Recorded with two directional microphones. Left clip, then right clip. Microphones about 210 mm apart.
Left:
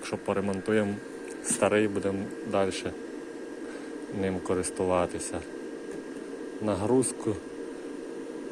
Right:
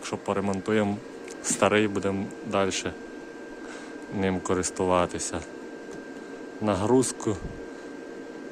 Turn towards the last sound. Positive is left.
turn(degrees=-15)  # may be behind; listen again after turning